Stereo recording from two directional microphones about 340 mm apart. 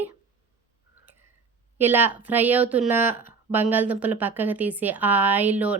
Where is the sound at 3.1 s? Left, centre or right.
Left.